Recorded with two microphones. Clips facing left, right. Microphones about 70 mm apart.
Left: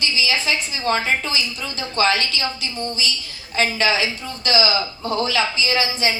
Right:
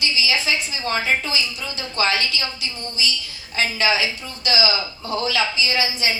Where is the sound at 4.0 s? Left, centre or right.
Left.